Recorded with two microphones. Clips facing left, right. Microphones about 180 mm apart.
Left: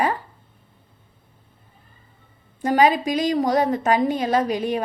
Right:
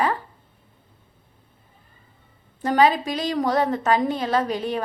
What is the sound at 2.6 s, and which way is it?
A woman's voice, 15° left (ahead or behind).